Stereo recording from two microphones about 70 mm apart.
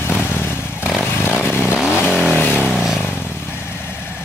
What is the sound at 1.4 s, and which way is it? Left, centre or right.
Vehicle, left.